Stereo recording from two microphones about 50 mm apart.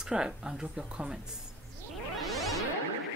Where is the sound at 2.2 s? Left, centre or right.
Centre.